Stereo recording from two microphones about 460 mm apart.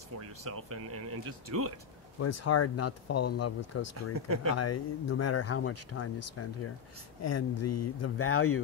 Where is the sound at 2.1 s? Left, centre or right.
Left.